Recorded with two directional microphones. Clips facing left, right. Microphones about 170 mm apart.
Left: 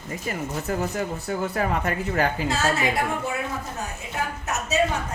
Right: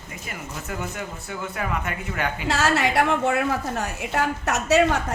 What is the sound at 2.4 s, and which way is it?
A woman's voice, 80° right.